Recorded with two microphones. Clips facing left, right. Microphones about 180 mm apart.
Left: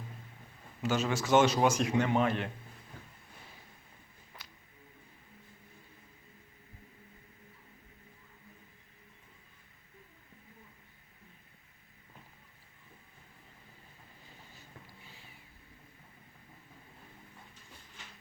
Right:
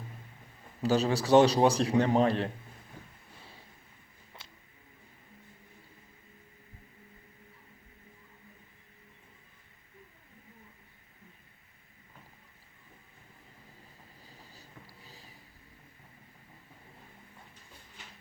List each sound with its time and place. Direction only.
0.8 s speech: 35° right (ahead or behind)
4.4 s music: 25° right (ahead or behind)
14.3 s cat: 35° right (ahead or behind)